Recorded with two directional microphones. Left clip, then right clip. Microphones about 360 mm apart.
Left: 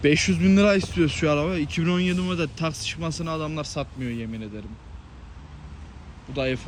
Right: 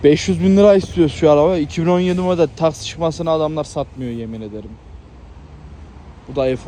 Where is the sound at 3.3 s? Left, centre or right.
Centre.